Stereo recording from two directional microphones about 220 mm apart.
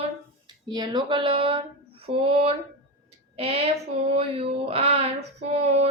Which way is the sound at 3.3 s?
25° right (ahead or behind).